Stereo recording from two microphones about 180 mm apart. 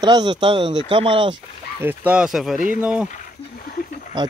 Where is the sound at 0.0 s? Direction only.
25° right (ahead or behind).